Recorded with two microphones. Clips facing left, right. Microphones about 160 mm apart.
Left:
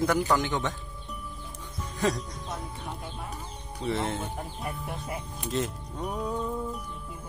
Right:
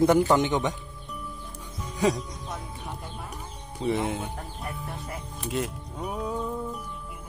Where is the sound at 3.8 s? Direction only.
15° right (ahead or behind).